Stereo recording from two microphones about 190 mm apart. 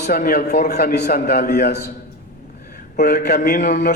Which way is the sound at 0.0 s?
50° left (ahead or behind).